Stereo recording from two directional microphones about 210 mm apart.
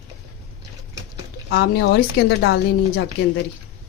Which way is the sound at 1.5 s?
50° left (ahead or behind).